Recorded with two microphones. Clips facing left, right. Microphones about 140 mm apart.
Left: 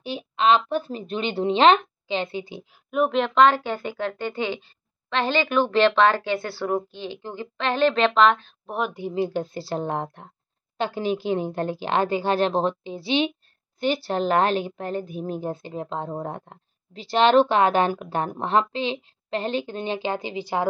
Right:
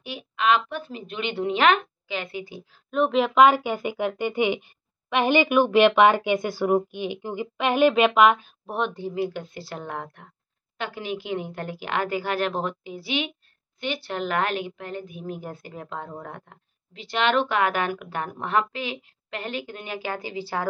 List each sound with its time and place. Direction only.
0.0 s a woman's voice: 30° left (ahead or behind)
2.9 s speech: centre (ahead or behind)
9.1 s a woman's voice: 30° left (ahead or behind)